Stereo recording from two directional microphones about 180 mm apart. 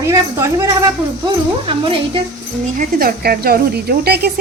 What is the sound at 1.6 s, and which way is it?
Speech, 30° right (ahead or behind).